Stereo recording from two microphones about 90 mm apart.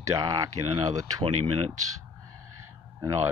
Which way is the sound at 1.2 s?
75° right (ahead or behind).